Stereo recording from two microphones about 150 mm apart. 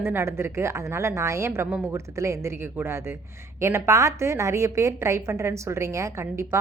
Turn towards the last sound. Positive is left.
turn(degrees=-20)  # may be behind; listen again after turning